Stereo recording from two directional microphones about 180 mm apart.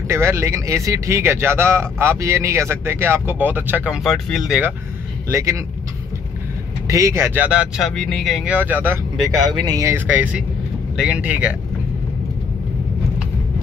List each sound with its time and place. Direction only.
0.1 s speech: 15° right (ahead or behind)
5.3 s speech: 15° right (ahead or behind)
6.9 s speech: 15° right (ahead or behind)